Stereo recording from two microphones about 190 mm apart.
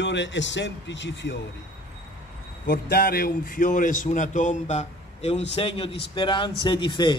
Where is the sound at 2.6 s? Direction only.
55° left (ahead or behind).